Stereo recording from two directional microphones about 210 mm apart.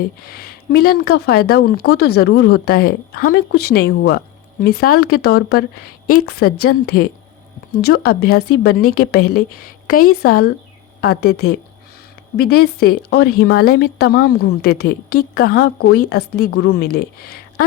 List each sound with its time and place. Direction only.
0.3 s a woman's voice: 45° left (ahead or behind)
10.0 s speech: 90° left
10.2 s a woman's voice: 45° left (ahead or behind)